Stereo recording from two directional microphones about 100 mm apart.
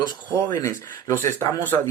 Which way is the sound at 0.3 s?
30° left (ahead or behind).